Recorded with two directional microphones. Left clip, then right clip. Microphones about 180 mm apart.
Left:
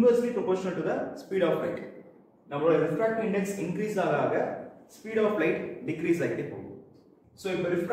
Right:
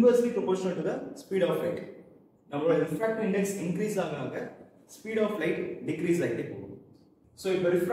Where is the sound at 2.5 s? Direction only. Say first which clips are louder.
Left 2 dB; 15° left (ahead or behind).